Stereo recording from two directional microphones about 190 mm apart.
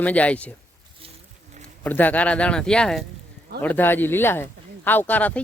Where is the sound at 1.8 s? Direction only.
10° left (ahead or behind).